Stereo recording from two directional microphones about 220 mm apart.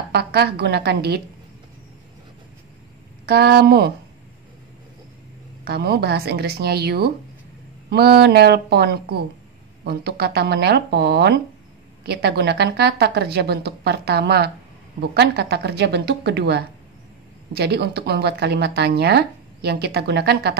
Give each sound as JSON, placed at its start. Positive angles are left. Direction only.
{"t": 0.1, "sound": "speech", "side_deg": -45}
{"t": 3.3, "sound": "speech", "side_deg": -45}
{"t": 5.7, "sound": "speech", "side_deg": -45}